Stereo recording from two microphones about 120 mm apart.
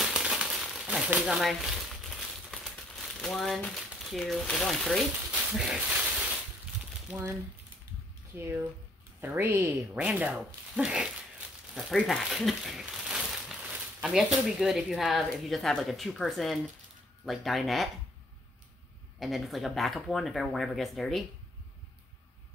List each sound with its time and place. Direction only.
0.0 s crumpling: 5° right (ahead or behind)
0.8 s a sound: 10° right (ahead or behind)
1.2 s crumpling: centre (ahead or behind)
5.3 s speech: 5° right (ahead or behind)
8.4 s a woman's voice: 20° right (ahead or behind)
9.9 s speech: 10° right (ahead or behind)
19.1 s speech: centre (ahead or behind)